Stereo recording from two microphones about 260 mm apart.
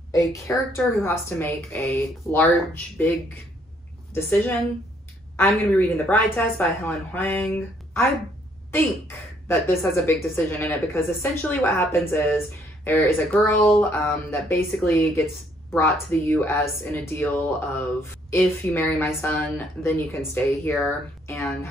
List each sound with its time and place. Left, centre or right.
0.1 s speech: centre
4.1 s speech: centre